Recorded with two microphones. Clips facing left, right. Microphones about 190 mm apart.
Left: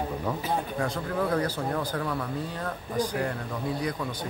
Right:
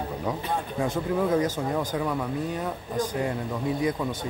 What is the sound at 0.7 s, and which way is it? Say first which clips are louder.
Speech: right 3 dB; 20° right (ahead or behind).